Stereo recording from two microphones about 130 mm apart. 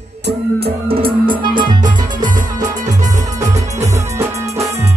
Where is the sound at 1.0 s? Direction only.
40° right (ahead or behind).